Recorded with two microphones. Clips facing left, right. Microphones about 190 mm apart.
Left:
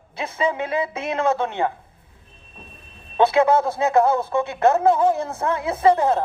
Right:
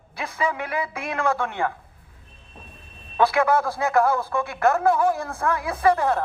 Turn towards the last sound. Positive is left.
turn(degrees=20)  # may be behind; listen again after turning